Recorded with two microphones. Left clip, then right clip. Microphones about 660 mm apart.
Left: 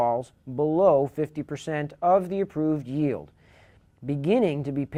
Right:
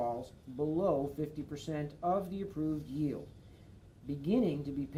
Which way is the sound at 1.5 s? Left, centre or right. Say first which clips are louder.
Left 10 dB; left.